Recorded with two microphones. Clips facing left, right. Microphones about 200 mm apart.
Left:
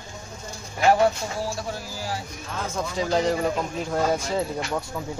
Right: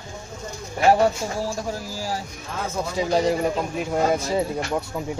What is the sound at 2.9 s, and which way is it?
Speech, 10° right (ahead or behind).